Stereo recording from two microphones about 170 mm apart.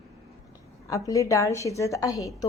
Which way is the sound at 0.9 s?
20° left (ahead or behind).